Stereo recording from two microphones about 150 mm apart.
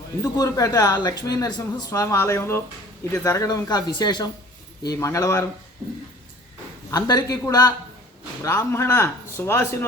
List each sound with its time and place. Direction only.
0.2 s speech: 20° left (ahead or behind)
6.9 s a man's voice: 25° left (ahead or behind)